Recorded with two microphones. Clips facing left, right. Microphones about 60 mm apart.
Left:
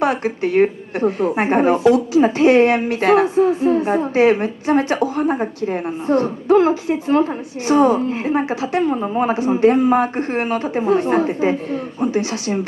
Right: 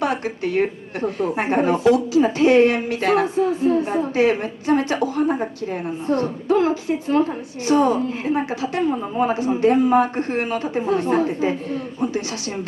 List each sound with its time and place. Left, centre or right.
0.0 s a woman's voice: left